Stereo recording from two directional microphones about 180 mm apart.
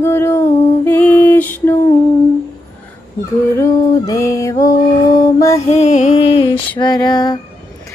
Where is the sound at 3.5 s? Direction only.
15° left (ahead or behind).